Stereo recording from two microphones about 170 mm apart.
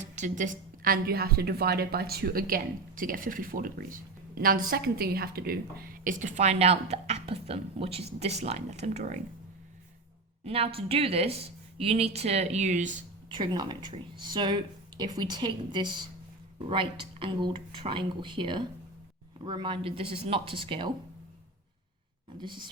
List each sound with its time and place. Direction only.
0.0 s a woman's voice: 45° right (ahead or behind)
10.4 s speech: 35° right (ahead or behind)
13.2 s a woman's voice: 25° right (ahead or behind)
22.4 s a woman's voice: 25° right (ahead or behind)